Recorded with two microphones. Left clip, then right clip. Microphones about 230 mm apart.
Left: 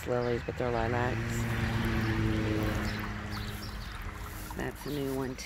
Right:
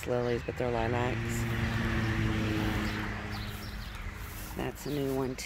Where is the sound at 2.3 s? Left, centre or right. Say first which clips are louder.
Even; right.